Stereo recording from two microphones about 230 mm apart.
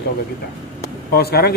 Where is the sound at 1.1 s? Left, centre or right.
Left.